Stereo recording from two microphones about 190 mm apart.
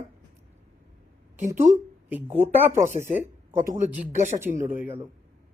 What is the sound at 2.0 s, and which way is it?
Speech, 10° right (ahead or behind).